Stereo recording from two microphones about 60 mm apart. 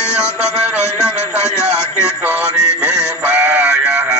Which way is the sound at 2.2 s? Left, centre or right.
Right.